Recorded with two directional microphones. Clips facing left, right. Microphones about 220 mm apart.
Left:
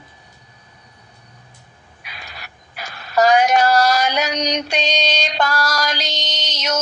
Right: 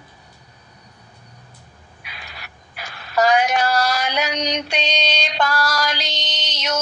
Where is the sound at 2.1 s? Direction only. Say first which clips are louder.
Left 2 dB; 40° left (ahead or behind).